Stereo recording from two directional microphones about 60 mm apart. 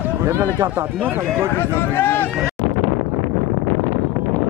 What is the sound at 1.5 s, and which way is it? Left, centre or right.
Speech, left.